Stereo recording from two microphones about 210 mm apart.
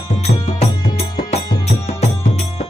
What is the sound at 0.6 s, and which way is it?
Music, 30° left (ahead or behind).